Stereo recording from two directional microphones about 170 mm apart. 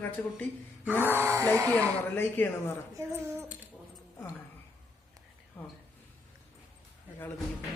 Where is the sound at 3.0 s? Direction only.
15° right (ahead or behind).